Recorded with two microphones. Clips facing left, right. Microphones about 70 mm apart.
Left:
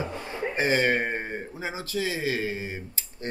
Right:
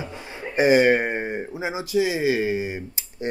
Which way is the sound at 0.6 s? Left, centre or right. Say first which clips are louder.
Right 8 dB; centre.